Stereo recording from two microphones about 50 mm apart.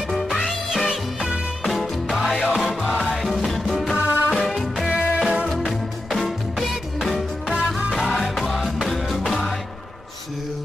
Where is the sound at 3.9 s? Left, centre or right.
Right.